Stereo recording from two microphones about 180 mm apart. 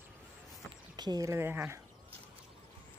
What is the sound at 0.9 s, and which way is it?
Speech, 20° right (ahead or behind).